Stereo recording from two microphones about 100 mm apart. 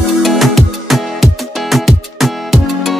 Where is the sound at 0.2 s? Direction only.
Centre (ahead or behind).